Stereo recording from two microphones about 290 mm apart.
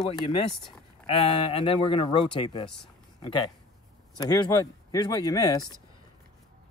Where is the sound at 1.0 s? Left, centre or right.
Centre.